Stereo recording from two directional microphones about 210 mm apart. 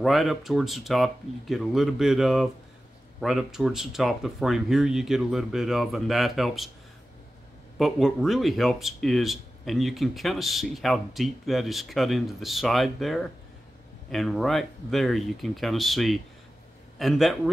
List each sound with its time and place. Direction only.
0.0 s speech: centre (ahead or behind)
7.8 s speech: centre (ahead or behind)